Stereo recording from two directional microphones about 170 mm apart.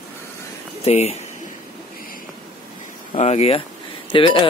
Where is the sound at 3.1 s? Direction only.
40° left (ahead or behind).